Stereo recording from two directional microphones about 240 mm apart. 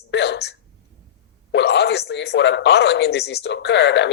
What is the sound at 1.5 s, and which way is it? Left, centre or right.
Speech, left.